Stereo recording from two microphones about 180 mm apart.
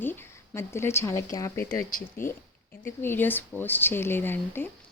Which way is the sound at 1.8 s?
50° left (ahead or behind).